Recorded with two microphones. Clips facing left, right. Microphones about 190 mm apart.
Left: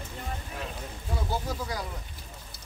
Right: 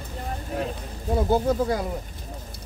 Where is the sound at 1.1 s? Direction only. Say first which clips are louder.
Right 12 dB; 55° right (ahead or behind).